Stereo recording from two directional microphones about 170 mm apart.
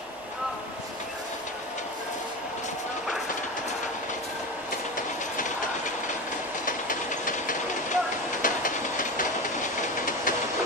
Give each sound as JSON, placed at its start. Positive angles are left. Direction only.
{"t": 4.9, "sound": "train", "side_deg": 50}